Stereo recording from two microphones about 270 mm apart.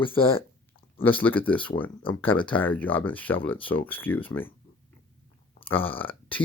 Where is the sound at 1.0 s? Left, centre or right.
Centre.